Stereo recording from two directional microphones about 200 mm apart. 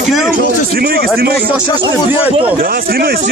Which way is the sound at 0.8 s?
50° right (ahead or behind).